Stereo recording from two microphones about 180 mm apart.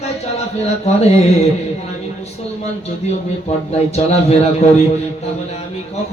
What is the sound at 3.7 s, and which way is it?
Chant, 35° left (ahead or behind).